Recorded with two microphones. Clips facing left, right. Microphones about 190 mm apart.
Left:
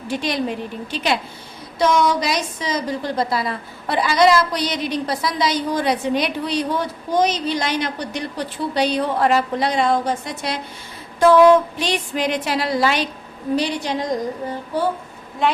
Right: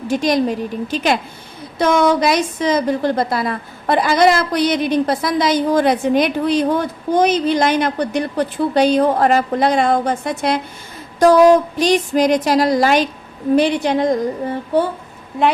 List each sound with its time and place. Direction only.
0.1 s a woman's voice: 45° right (ahead or behind)
11.2 s a woman's voice: 40° right (ahead or behind); by 14.1 s 55° right (ahead or behind)